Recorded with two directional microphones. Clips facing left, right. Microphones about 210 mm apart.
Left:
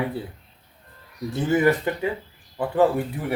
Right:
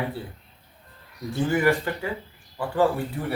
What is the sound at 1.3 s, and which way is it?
Speech, 20° left (ahead or behind).